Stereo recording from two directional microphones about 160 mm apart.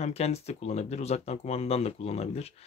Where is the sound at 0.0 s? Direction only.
40° left (ahead or behind).